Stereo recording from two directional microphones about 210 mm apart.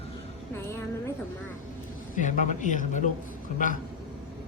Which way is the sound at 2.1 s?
35° left (ahead or behind).